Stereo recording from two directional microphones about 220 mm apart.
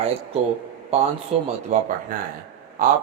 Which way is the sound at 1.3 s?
25° right (ahead or behind).